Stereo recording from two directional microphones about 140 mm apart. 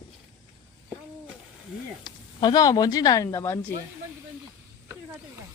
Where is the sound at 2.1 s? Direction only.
30° left (ahead or behind).